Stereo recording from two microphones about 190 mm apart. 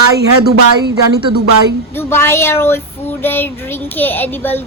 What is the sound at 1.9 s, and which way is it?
Child singing, 10° left (ahead or behind).